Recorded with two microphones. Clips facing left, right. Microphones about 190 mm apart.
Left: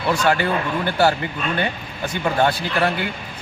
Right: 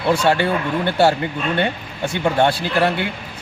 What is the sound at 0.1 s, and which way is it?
A man's voice, 25° right (ahead or behind).